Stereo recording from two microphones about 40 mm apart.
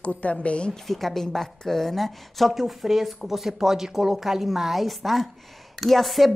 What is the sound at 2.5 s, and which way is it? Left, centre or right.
A woman's voice, centre.